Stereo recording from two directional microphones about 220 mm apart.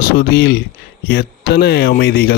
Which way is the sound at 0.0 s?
40° left (ahead or behind).